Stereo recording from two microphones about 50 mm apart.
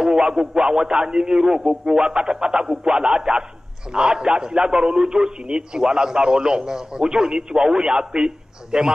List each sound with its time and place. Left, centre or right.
0.0 s a man's voice: centre